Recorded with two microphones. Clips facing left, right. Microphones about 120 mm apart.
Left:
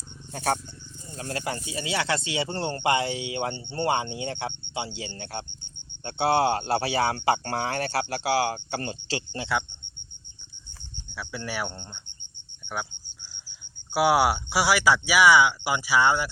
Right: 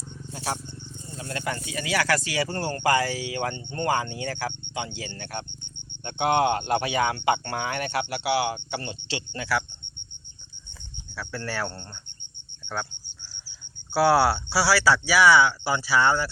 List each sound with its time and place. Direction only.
1.1 s speech: 35° left (ahead or behind)
11.1 s speech: 15° left (ahead or behind)
13.9 s speech: 15° left (ahead or behind)